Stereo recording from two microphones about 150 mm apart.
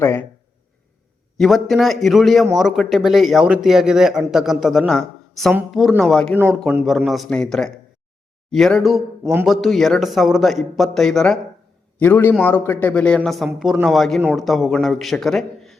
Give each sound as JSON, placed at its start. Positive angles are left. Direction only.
{"t": 0.0, "sound": "speech", "side_deg": 15}
{"t": 1.4, "sound": "speech", "side_deg": 0}